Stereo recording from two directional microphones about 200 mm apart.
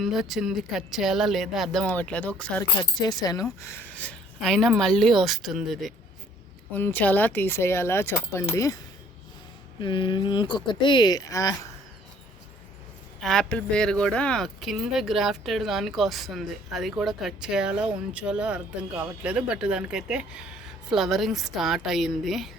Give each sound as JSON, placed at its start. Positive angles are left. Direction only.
{"t": 0.0, "sound": "speech", "side_deg": 0}
{"t": 3.0, "sound": "speech", "side_deg": 20}
{"t": 6.7, "sound": "speech", "side_deg": 10}
{"t": 9.8, "sound": "speech", "side_deg": 25}
{"t": 13.2, "sound": "speech", "side_deg": 0}